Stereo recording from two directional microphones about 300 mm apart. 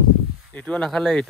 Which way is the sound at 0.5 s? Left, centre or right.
Centre.